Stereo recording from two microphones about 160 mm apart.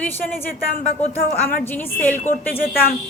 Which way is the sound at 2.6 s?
70° left (ahead or behind).